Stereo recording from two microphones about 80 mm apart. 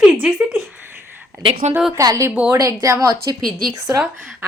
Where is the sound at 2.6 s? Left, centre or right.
Right.